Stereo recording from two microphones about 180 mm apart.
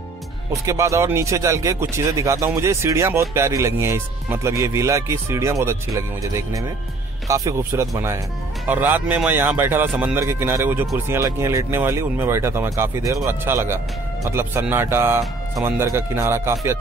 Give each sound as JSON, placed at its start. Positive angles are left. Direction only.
{"t": 0.7, "sound": "speech", "side_deg": -15}